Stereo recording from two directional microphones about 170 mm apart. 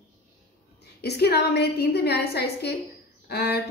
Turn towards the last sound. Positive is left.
turn(degrees=70)  # may be behind; listen again after turning